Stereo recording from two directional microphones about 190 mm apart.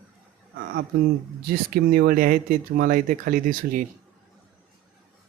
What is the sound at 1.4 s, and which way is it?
Speech, 55° right (ahead or behind).